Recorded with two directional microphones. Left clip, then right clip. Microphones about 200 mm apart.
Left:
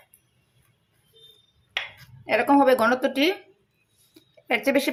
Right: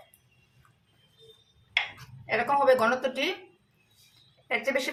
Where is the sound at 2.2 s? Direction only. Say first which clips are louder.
Left 4 dB; 40° left (ahead or behind).